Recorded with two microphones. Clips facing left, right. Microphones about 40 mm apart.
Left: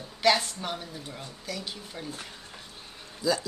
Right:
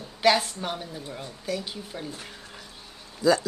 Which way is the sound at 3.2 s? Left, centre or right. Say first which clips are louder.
Right 6 dB; right.